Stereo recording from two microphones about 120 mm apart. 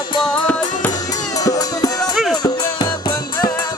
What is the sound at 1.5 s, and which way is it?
Music, 30° left (ahead or behind).